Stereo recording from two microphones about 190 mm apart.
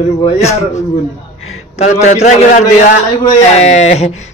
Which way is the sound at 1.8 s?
35° left (ahead or behind).